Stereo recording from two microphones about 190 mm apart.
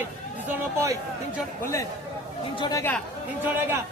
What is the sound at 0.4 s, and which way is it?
Speech, 15° right (ahead or behind).